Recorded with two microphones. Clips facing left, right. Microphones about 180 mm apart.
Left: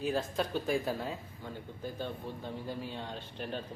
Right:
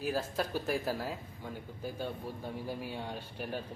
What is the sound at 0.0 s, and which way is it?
Speech, 5° right (ahead or behind).